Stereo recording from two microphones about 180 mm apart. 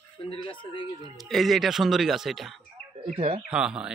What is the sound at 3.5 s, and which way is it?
Speech, 5° right (ahead or behind).